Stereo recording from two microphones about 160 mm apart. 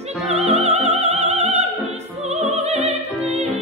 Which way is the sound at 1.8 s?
40° right (ahead or behind).